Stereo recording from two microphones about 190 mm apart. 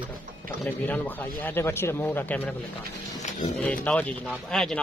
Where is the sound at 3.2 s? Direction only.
35° left (ahead or behind).